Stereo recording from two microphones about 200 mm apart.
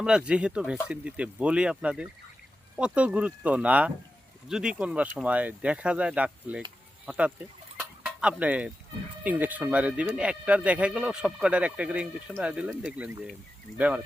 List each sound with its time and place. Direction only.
0.3 s speech: 5° right (ahead or behind)
7.8 s a sound: 5° right (ahead or behind)
9.2 s speech: 10° right (ahead or behind)